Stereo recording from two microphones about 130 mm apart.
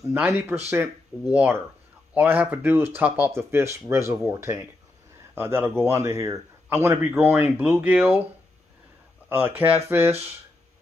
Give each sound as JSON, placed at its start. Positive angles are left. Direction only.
{"t": 0.0, "sound": "a man's voice", "side_deg": -20}
{"t": 9.3, "sound": "a man's voice", "side_deg": -15}